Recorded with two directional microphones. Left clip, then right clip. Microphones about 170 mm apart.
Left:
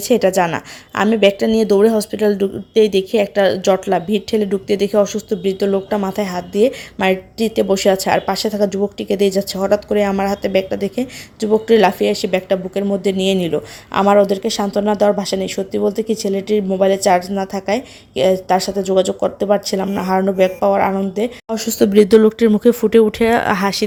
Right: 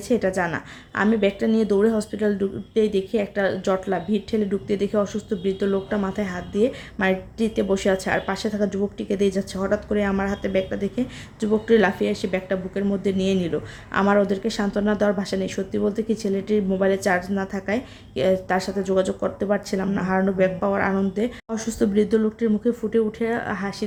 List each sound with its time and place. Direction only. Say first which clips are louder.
0.1 s a woman's voice: left 8 dB; 35° left (ahead or behind); by 23.8 s 55° left (ahead or behind)